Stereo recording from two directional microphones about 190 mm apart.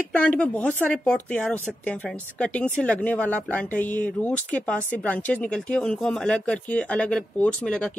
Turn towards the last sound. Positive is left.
turn(degrees=5)  # may be behind; listen again after turning